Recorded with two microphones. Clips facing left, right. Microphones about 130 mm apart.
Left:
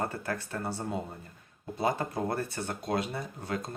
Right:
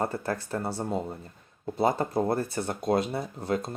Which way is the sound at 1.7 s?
30° right (ahead or behind).